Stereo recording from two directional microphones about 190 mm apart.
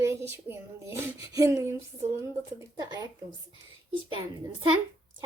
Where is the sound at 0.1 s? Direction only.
15° right (ahead or behind).